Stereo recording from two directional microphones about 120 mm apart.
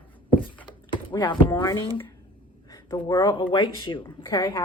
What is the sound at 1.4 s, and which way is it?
Speech, 15° left (ahead or behind).